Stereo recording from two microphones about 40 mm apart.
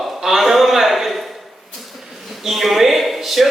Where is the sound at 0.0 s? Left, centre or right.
Centre.